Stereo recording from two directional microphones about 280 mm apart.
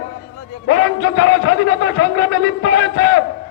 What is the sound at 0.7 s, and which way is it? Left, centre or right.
A man's voice, left.